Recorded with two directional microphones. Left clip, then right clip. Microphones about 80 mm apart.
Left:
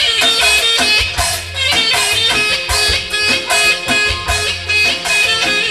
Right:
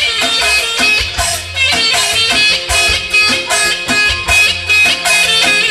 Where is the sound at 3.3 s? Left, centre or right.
Centre.